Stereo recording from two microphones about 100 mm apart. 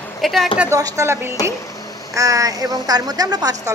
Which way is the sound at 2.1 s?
35° right (ahead or behind).